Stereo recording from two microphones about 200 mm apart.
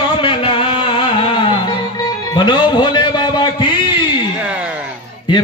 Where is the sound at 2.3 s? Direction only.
20° left (ahead or behind).